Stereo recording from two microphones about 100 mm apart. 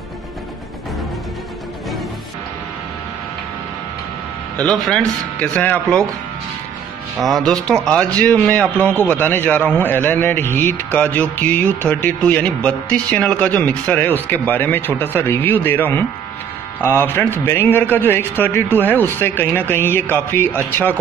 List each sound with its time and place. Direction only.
4.6 s speech: 5° left (ahead or behind)
7.2 s a man's voice: centre (ahead or behind); by 20.9 s 20° left (ahead or behind)